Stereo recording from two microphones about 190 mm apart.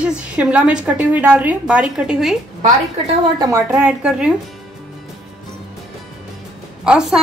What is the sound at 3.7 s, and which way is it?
Speech, 5° right (ahead or behind).